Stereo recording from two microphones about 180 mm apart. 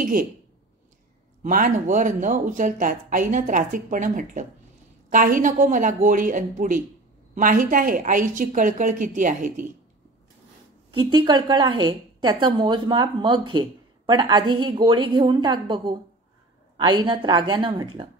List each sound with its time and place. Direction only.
0.0 s speech: 50° right (ahead or behind)
1.4 s speech: 50° right (ahead or behind)
10.9 s a woman's voice: 25° right (ahead or behind)